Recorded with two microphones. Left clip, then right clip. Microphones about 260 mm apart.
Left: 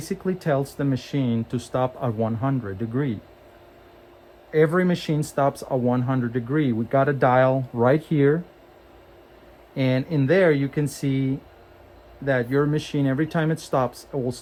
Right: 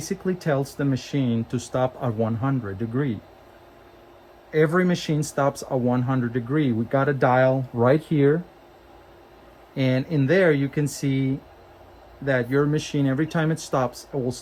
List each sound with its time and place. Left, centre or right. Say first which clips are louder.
0.0 s speech: even; left
4.5 s speech: left 1 dB; left
9.7 s speech: even; left